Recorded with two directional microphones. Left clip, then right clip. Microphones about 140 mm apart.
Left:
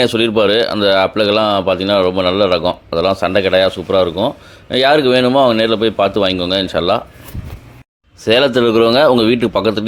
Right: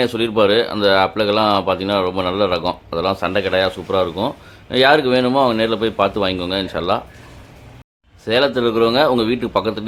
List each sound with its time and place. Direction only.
0.0 s speech: 35° left (ahead or behind)
8.2 s a man's voice: 45° left (ahead or behind)